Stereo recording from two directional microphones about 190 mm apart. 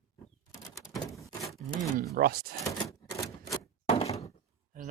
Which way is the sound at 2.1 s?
50° right (ahead or behind).